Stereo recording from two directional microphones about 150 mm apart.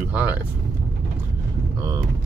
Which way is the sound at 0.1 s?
10° right (ahead or behind).